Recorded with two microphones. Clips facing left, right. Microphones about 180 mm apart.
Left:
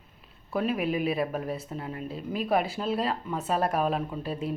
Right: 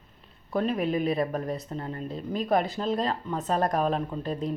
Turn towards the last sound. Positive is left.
turn(degrees=5)  # may be behind; listen again after turning